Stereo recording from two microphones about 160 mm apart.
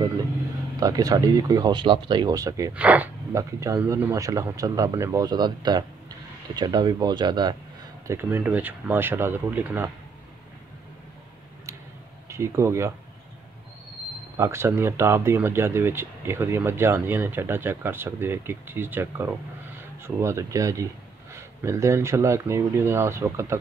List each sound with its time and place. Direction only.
0.7 s speech: 20° right (ahead or behind)
2.7 s speech: 10° right (ahead or behind)
3.3 s speech: 20° right (ahead or behind)
8.1 s speech: 15° right (ahead or behind)
12.3 s speech: 15° right (ahead or behind)
14.3 s speech: 15° right (ahead or behind)